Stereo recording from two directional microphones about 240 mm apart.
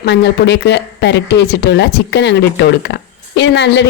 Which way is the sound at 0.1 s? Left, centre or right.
Left.